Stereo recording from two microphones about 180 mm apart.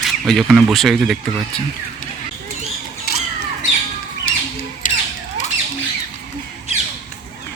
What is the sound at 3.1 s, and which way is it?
Squawk, 60° left (ahead or behind).